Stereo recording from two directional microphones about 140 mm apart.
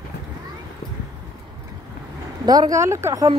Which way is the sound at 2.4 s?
30° right (ahead or behind).